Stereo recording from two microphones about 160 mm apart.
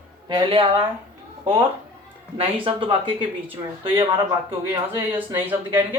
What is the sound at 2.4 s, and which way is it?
Speech, 35° right (ahead or behind).